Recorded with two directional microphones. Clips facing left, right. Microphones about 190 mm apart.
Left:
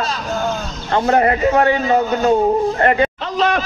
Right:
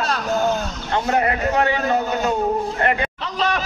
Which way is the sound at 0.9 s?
40° left (ahead or behind).